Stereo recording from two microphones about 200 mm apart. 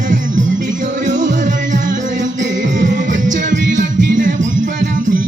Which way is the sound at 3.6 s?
40° right (ahead or behind).